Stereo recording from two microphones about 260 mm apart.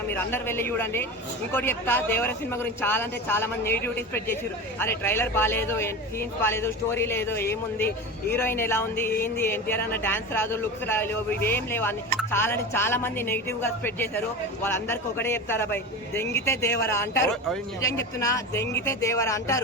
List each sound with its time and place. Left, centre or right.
0.1 s a man's voice: centre